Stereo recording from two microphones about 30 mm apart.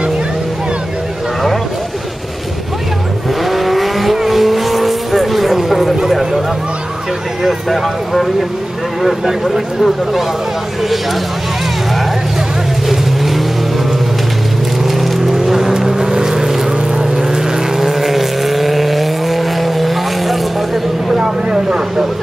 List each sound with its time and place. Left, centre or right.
3.4 s vehicle: centre
7.4 s speech: centre
12.8 s vehicle: centre
15.0 s vehicle: centre
21.1 s speech: right